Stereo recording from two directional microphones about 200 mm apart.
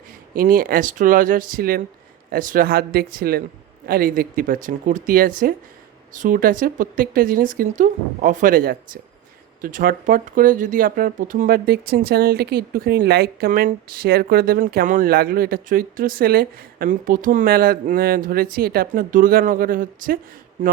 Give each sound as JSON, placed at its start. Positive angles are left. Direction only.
{"t": 0.3, "sound": "speech", "side_deg": -45}